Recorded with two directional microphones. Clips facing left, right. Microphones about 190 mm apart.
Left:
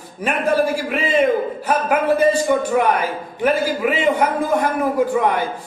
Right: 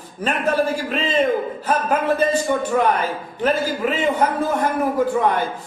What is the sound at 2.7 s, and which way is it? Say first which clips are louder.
A man's voice: left 1 dB; 10° left (ahead or behind).